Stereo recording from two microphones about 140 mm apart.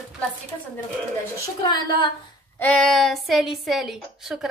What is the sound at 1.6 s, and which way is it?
Speech, 30° left (ahead or behind).